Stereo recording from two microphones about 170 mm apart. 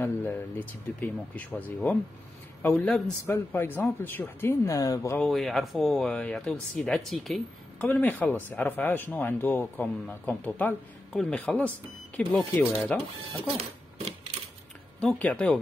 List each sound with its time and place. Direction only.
0.0 s speech: 10° left (ahead or behind)
5.2 s speech: centre (ahead or behind)
13.6 s a sound: 35° right (ahead or behind)
15.0 s speech: 10° left (ahead or behind)